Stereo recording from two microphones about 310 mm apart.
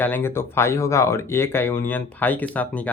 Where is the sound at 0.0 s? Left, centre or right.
Centre.